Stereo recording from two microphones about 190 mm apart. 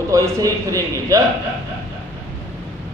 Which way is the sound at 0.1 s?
15° right (ahead or behind).